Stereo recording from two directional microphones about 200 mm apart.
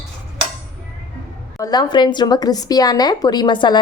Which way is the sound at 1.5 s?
20° left (ahead or behind).